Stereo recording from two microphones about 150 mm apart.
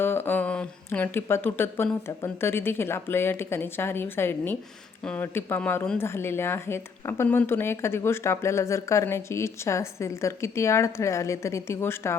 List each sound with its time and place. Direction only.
0.0 s speech: 15° left (ahead or behind)